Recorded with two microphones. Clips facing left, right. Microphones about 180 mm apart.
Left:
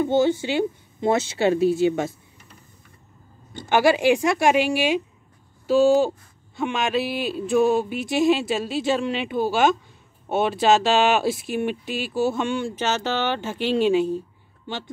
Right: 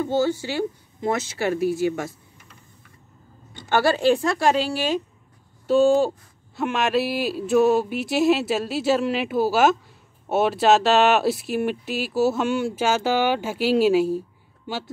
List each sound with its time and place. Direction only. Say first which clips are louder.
0.0 s speech: left 3 dB; 20° left (ahead or behind)
3.6 s a woman's voice: left 1 dB; 15° left (ahead or behind)
5.7 s speech: even; centre (ahead or behind)